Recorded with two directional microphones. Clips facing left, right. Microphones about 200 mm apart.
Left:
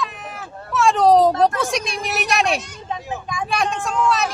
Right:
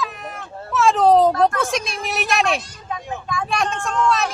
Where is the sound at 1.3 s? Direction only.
25° left (ahead or behind).